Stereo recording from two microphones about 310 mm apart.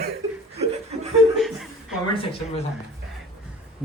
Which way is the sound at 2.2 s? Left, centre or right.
Centre.